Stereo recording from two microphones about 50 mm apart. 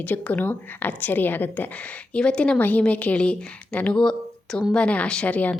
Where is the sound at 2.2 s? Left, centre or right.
Left.